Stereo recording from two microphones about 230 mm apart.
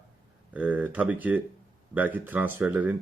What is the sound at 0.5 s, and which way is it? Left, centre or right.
Speech, centre.